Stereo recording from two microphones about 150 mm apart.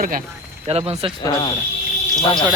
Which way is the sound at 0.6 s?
40° right (ahead or behind).